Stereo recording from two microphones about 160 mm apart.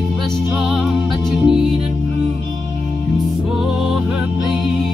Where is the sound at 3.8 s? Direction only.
5° right (ahead or behind).